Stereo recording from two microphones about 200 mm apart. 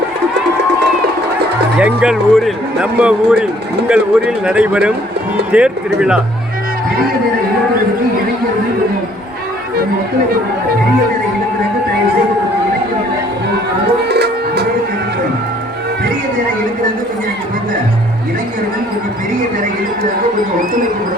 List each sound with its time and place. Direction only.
1.8 s speech: 5° right (ahead or behind)
14.1 s music: 55° right (ahead or behind)